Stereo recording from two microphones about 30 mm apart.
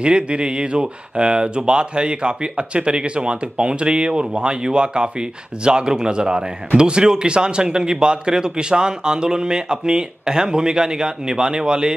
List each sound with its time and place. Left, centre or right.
0.0 s speech: right